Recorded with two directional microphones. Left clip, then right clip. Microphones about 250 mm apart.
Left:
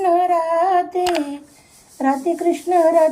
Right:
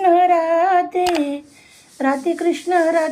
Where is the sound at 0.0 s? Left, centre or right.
Centre.